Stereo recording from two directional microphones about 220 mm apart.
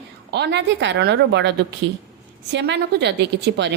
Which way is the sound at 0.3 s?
50° right (ahead or behind).